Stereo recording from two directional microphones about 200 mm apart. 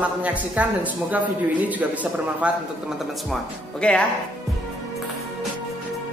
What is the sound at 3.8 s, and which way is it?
Speech, 5° left (ahead or behind).